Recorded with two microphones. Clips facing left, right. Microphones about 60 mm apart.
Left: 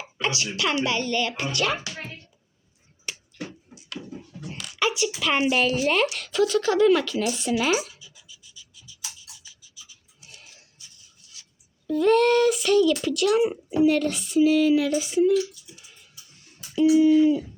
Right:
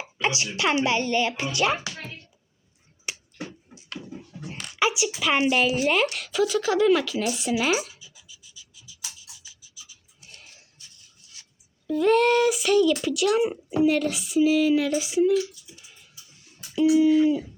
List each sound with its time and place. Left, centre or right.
0.0 s a sound: right
0.5 s a woman's voice: right
3.1 s finger snapping: centre
4.4 s dog: right
4.8 s a sound: centre
5.2 s a child's voice: centre
8.0 s scratch: centre
11.9 s a child's voice: centre